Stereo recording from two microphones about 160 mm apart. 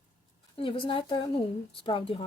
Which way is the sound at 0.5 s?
35° left (ahead or behind).